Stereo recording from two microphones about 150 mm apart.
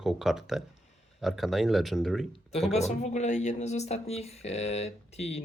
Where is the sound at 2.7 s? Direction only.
45° left (ahead or behind).